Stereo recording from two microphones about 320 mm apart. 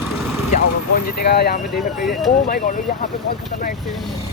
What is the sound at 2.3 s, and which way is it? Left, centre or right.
Speech, left.